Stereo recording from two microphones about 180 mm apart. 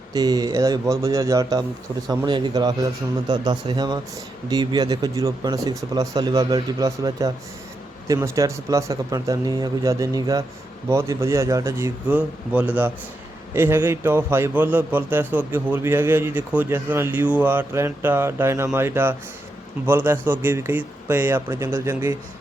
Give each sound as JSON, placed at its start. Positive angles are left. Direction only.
{"t": 0.1, "sound": "a man's voice", "side_deg": -20}